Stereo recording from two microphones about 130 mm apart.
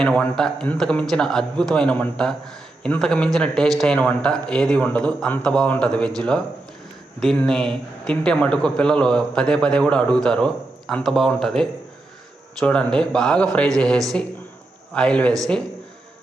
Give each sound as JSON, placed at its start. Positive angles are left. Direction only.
{"t": 0.0, "sound": "a man's voice", "side_deg": 5}